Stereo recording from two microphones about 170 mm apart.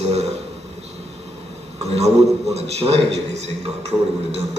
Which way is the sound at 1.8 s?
40° right (ahead or behind).